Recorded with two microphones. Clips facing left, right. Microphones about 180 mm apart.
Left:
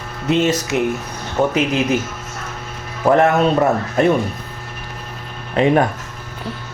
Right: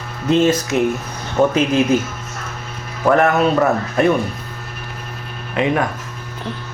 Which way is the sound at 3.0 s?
25° left (ahead or behind).